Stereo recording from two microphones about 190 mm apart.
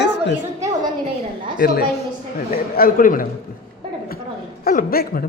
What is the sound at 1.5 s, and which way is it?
A man's voice, 50° left (ahead or behind).